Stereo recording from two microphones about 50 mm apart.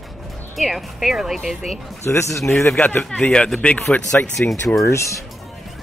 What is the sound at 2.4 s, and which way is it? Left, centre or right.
A man's voice, centre.